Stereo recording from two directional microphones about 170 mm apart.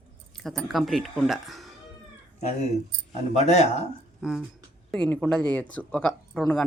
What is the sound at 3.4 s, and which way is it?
Speech, 40° left (ahead or behind).